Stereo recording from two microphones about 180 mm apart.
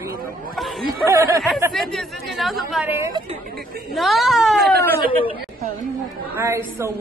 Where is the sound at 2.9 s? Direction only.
15° right (ahead or behind).